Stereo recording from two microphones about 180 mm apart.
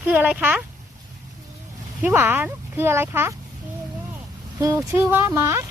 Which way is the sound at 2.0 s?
10° right (ahead or behind).